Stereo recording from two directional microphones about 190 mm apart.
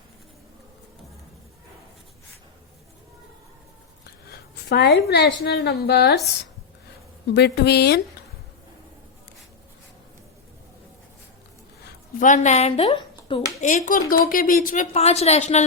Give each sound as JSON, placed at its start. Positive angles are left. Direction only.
{"t": 4.3, "sound": "a woman's voice", "side_deg": 60}
{"t": 7.3, "sound": "a woman's voice", "side_deg": 60}
{"t": 12.2, "sound": "speech", "side_deg": 40}
{"t": 13.7, "sound": "speech", "side_deg": 45}